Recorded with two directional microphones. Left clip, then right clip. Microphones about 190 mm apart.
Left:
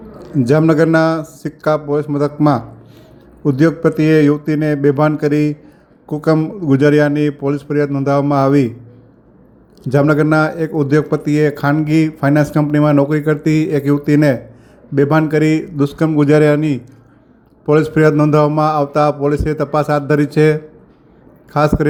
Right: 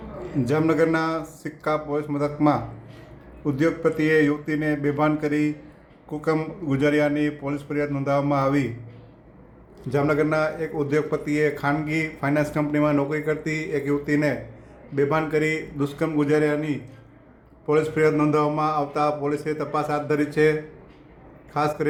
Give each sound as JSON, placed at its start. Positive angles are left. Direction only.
{"t": 0.2, "sound": "a man's voice", "side_deg": 35}
{"t": 9.8, "sound": "a man's voice", "side_deg": 35}